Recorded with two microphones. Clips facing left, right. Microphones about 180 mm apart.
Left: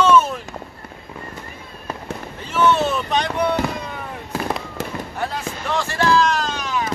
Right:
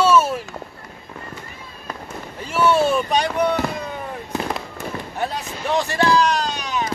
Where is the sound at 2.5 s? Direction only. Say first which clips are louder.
Right 1 dB; 10° right (ahead or behind).